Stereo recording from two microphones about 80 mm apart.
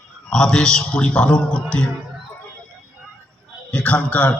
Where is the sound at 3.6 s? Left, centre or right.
Centre.